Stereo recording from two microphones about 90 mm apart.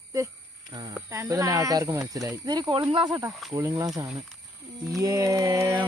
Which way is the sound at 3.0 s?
50° right (ahead or behind).